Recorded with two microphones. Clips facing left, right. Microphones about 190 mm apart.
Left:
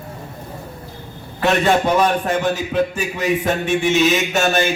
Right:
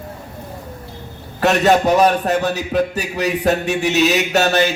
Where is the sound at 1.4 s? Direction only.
40° right (ahead or behind).